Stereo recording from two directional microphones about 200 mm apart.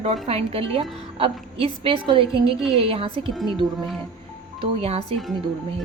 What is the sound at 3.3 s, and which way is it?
Speech, centre (ahead or behind).